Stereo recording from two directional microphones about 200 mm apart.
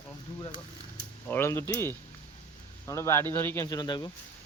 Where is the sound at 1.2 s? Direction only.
10° left (ahead or behind).